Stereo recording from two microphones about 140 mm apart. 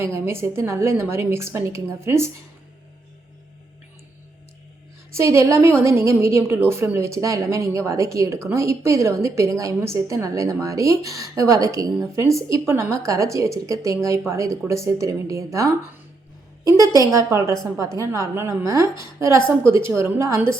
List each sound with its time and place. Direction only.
0.0 s a woman's voice: 20° right (ahead or behind)
5.1 s a woman's voice: 20° right (ahead or behind)